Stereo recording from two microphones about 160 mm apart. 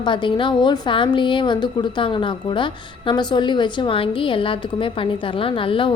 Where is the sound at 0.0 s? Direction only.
30° left (ahead or behind).